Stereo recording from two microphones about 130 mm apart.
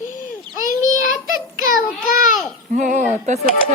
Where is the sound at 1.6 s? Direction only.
90° left.